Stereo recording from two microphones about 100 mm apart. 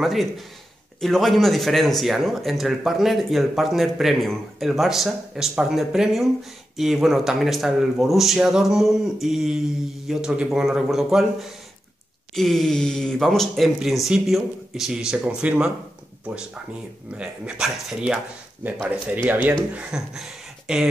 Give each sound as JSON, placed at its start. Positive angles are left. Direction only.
{"t": 0.0, "sound": "a man's voice", "side_deg": 0}
{"t": 17.1, "sound": "speech", "side_deg": -10}
{"t": 18.6, "sound": "speech", "side_deg": -15}